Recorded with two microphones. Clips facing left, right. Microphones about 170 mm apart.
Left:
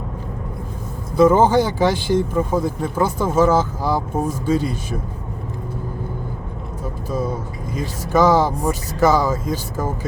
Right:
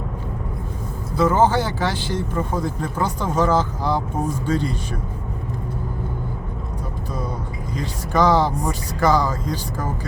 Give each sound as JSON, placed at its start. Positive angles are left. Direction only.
{"t": 1.1, "sound": "speech", "side_deg": 15}
{"t": 7.8, "sound": "speech", "side_deg": 5}